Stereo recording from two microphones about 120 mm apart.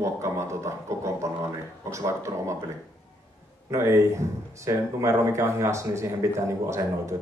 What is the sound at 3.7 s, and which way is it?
A man's voice, 25° right (ahead or behind).